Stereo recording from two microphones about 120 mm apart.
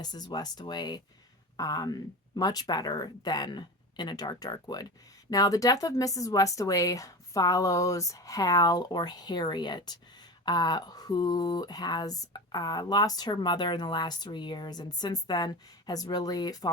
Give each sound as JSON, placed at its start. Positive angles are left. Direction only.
{"t": 0.0, "sound": "speech", "side_deg": 35}